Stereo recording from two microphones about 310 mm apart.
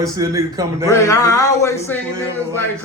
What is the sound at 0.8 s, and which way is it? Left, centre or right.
A man's voice, centre.